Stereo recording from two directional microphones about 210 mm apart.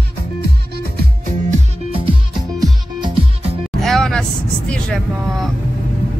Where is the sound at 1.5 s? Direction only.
25° right (ahead or behind).